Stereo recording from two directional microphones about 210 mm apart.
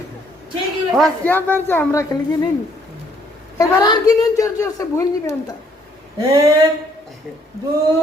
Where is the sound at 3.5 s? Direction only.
15° left (ahead or behind).